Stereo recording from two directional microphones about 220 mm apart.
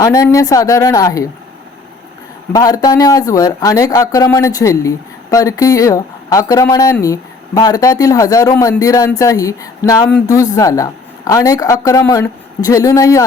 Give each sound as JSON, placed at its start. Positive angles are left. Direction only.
{"t": 0.0, "sound": "speech", "side_deg": 15}
{"t": 2.5, "sound": "speech", "side_deg": 15}